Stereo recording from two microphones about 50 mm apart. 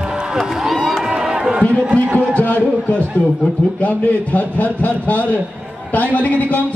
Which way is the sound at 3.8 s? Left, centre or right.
Left.